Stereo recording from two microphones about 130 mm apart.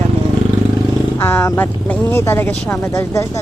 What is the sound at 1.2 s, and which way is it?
Speech, 15° left (ahead or behind).